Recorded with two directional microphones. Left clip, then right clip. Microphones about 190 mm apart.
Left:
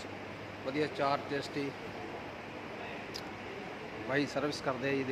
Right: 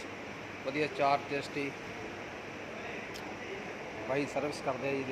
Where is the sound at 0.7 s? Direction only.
20° left (ahead or behind).